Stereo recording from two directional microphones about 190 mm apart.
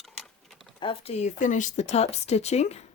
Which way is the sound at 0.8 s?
25° left (ahead or behind).